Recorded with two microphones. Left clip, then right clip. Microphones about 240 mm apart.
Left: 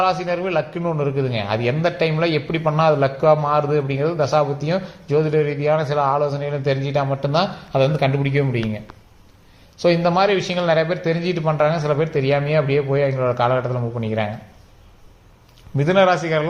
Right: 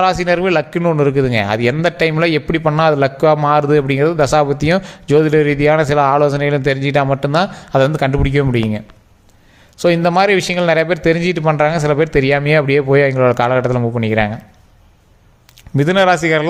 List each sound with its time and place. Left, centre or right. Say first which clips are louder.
0.0 s a man's voice: right 6 dB; right
9.8 s a man's voice: right 4 dB; right
15.7 s a man's voice: right 4 dB; right